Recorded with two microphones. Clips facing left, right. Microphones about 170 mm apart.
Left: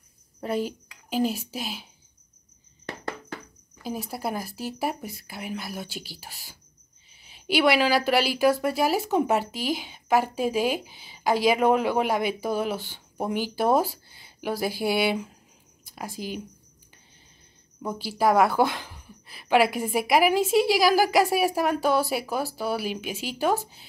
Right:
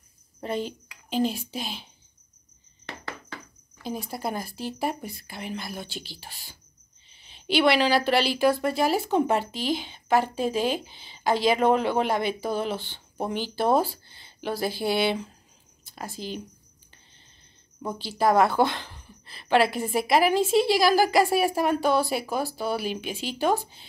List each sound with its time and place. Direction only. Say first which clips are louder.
0.4 s a child's voice: left 2 dB; 5° left (ahead or behind)
3.8 s a woman's voice: even; 5° left (ahead or behind)
17.8 s a woman's voice: even; 10° left (ahead or behind)